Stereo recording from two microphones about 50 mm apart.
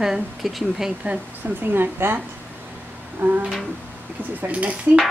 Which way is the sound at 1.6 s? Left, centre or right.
Right.